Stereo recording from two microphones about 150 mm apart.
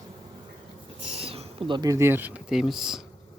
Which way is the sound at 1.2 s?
40° right (ahead or behind).